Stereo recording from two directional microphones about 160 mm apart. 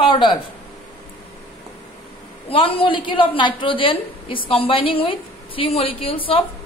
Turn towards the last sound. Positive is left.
turn(degrees=35)  # may be behind; listen again after turning